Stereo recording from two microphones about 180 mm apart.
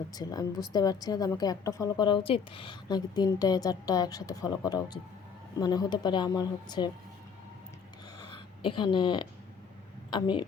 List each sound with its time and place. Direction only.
0.1 s a woman's voice: 20° left (ahead or behind)
8.2 s a sound: 25° left (ahead or behind)
10.1 s a woman's voice: 25° left (ahead or behind)